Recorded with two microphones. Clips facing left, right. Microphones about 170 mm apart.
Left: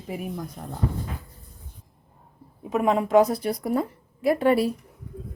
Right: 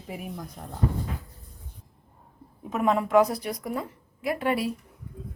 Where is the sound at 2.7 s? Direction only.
15° left (ahead or behind).